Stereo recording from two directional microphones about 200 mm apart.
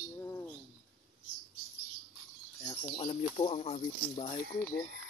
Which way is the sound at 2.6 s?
10° left (ahead or behind).